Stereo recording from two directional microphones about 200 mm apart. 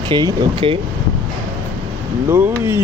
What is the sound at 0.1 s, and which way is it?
Speech, 20° right (ahead or behind).